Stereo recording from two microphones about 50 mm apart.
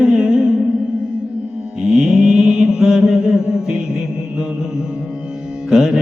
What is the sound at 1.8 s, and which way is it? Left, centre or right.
Mantra, centre.